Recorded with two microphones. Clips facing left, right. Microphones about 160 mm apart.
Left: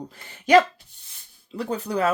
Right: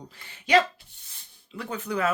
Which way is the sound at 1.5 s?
35° left (ahead or behind).